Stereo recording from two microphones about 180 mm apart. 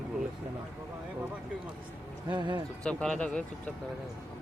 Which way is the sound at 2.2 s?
25° right (ahead or behind).